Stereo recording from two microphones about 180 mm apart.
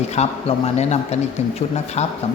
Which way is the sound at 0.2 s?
35° left (ahead or behind).